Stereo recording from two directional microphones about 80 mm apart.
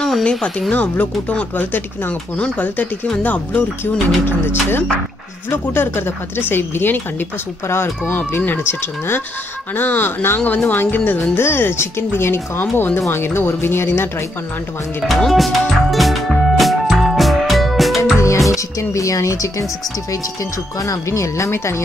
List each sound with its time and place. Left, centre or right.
0.2 s speech: centre
3.8 s speech: left
15.1 s music: centre
18.8 s speech: left
20.8 s speech: left